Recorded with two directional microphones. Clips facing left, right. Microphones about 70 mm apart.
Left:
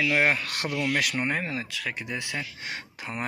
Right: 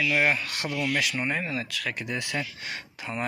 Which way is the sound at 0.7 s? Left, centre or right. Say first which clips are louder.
Left 1 dB; left.